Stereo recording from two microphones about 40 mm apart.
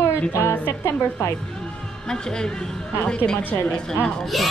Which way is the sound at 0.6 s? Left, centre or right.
Left.